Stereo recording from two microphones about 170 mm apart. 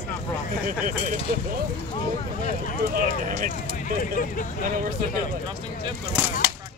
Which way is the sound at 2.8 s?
55° right (ahead or behind).